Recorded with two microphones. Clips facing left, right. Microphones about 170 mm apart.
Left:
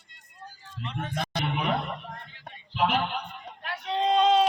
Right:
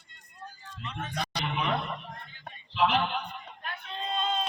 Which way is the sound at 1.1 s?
50° left (ahead or behind).